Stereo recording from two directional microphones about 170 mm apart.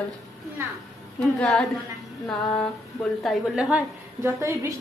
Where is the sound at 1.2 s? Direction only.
Centre (ahead or behind).